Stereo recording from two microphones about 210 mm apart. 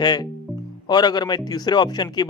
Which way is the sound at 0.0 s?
20° left (ahead or behind).